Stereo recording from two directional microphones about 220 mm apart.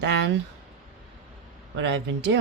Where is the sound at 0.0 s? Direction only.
55° right (ahead or behind).